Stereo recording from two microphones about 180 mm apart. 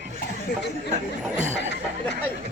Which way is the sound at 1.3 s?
40° right (ahead or behind).